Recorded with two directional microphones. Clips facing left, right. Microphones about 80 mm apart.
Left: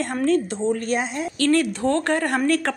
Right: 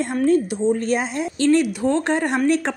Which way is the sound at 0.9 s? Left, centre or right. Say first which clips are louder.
Right 2 dB; right.